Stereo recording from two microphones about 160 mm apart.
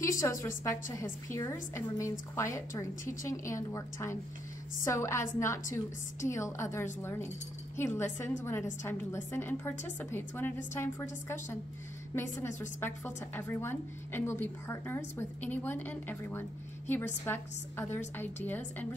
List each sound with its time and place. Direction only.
0.2 s a woman's voice: 20° left (ahead or behind)